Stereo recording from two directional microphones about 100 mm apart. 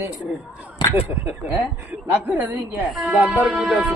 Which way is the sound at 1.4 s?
15° right (ahead or behind).